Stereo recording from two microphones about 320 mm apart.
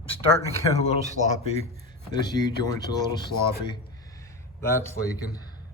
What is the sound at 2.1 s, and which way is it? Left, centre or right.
Speech, centre.